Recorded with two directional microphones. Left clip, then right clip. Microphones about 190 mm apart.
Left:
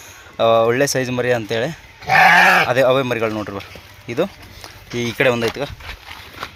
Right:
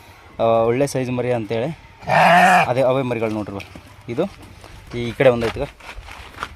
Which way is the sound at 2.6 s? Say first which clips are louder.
Left 3 dB; 5° right (ahead or behind).